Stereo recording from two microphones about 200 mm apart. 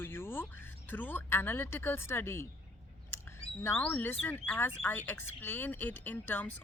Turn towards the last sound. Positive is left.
turn(degrees=10)  # may be behind; listen again after turning